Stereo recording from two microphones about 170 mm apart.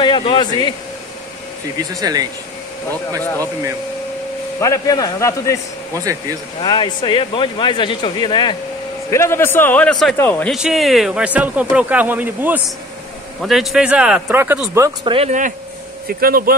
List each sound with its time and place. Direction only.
0.0 s speech: 30° left (ahead or behind)
1.8 s speech: 20° right (ahead or behind)
4.6 s speech: 20° left (ahead or behind)
6.6 s speech: 25° left (ahead or behind)
9.1 s a man's voice: 15° left (ahead or behind)
10.5 s speech: centre (ahead or behind)
15.0 s speech: 35° right (ahead or behind)
16.2 s speech: 60° right (ahead or behind)